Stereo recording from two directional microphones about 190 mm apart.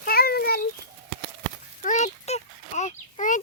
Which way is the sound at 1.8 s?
40° left (ahead or behind).